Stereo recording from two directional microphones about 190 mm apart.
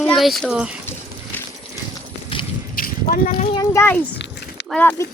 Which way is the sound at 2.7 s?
45° left (ahead or behind).